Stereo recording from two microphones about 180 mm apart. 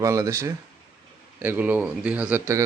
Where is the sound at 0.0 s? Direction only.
15° right (ahead or behind).